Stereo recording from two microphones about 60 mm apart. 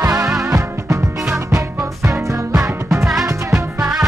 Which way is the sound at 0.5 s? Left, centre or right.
Right.